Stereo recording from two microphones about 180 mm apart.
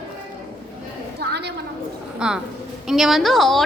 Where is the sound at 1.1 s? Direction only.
70° right (ahead or behind).